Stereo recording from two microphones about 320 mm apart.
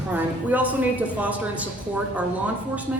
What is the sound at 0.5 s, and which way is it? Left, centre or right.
Speech, centre.